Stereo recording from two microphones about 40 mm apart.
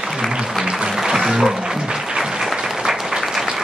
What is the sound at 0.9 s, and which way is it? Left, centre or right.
Music, centre.